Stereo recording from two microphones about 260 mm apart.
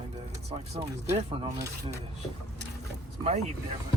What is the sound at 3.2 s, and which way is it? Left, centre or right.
Speech, right.